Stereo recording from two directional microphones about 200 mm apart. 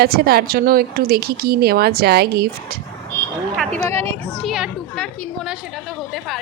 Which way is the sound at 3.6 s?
10° left (ahead or behind).